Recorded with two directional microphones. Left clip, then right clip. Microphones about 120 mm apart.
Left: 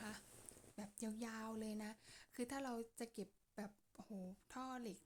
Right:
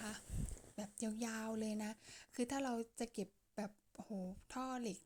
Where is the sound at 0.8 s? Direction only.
20° right (ahead or behind).